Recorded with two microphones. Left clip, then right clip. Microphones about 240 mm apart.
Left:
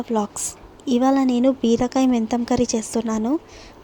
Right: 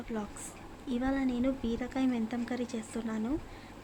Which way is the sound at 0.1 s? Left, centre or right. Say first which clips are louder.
Left 16 dB; left.